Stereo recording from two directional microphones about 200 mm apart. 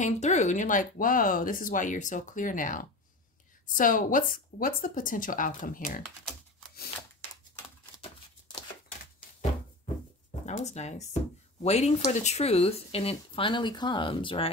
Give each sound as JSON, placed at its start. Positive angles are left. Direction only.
{"t": 0.0, "sound": "a woman's voice", "side_deg": 35}
{"t": 10.4, "sound": "speech", "side_deg": 35}